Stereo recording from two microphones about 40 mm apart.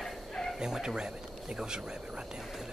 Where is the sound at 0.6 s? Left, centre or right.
Centre.